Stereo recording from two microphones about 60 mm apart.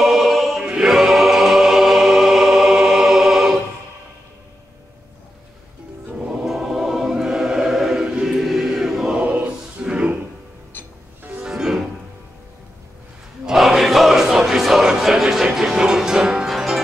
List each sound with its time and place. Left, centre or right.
0.0 s choir: centre
6.4 s choir: centre
9.2 s a sound: right
11.4 s music: centre
13.5 s music: centre